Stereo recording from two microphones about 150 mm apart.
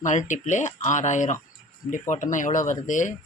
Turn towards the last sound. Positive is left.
turn(degrees=55)  # may be behind; listen again after turning